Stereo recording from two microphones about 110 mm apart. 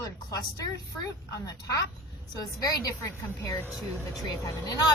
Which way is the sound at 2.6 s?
35° left (ahead or behind).